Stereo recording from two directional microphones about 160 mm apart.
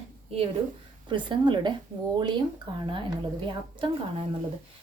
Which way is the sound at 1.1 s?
30° right (ahead or behind).